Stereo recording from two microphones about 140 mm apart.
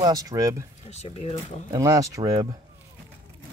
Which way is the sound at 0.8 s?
50° left (ahead or behind).